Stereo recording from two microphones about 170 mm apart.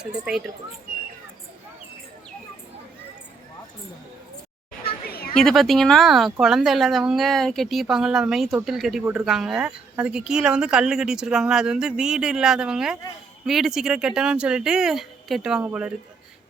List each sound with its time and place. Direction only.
0.0 s speech: 5° right (ahead or behind)
5.0 s a sound: 65° left (ahead or behind)
5.3 s speech: 5° left (ahead or behind)